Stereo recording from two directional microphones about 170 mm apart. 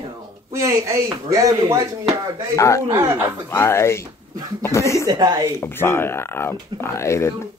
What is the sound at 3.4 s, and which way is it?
Speech, 15° left (ahead or behind).